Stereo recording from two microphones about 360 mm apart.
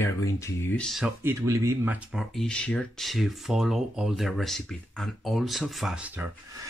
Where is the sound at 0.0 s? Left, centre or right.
Centre.